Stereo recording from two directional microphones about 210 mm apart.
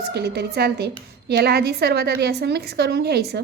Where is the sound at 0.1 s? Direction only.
50° right (ahead or behind).